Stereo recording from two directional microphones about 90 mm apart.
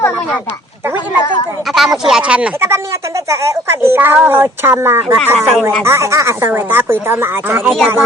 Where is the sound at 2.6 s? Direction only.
30° right (ahead or behind).